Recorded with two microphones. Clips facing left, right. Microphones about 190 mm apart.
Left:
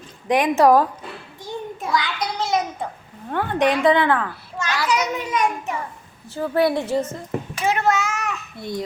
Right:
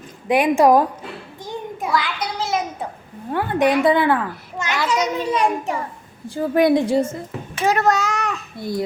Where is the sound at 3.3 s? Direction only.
5° right (ahead or behind); by 5.8 s 30° right (ahead or behind).